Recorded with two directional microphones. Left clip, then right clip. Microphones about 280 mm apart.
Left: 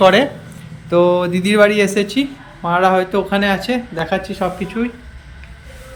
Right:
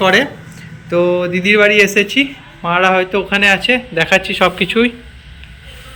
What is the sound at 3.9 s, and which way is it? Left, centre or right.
Speech, centre.